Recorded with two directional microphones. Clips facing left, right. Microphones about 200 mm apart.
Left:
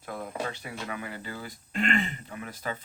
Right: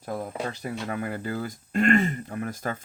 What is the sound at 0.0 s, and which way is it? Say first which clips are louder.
Speech: right 3 dB; 40° right (ahead or behind).